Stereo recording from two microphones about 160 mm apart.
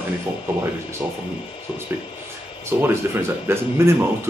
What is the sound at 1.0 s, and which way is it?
Speech, 5° right (ahead or behind).